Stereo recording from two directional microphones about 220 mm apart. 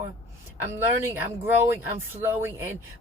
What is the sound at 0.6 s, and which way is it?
Speech, 10° right (ahead or behind).